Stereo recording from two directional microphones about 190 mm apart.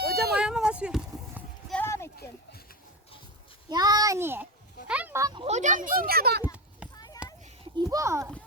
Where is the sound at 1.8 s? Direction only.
15° left (ahead or behind).